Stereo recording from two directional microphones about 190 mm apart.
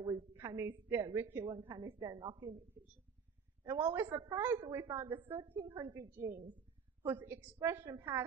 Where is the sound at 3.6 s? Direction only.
15° right (ahead or behind).